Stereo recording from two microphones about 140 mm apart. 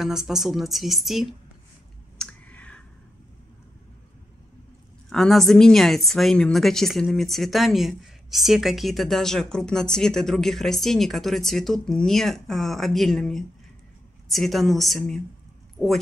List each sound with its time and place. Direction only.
0.0 s a woman's voice: 5° right (ahead or behind)
2.1 s clicking: 10° left (ahead or behind)
5.1 s a woman's voice: centre (ahead or behind)